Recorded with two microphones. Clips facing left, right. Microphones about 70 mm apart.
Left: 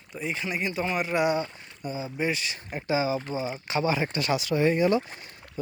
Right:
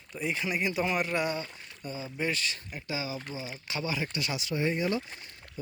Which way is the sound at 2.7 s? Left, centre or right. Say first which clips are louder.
Left 14 dB; left.